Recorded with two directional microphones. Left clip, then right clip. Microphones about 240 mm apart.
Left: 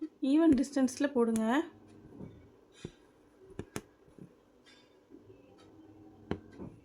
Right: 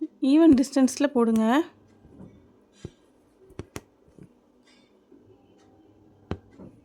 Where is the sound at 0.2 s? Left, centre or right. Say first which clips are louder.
Right 9 dB; right.